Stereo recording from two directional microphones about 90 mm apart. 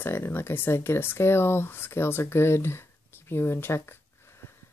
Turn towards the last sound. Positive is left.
turn(degrees=30)  # may be behind; listen again after turning